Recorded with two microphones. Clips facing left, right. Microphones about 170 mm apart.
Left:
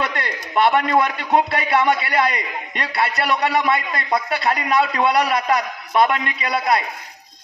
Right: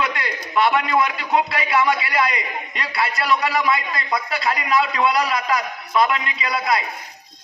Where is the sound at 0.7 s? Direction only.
55° left (ahead or behind).